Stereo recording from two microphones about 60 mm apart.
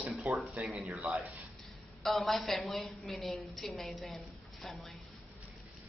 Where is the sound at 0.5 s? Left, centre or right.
Centre.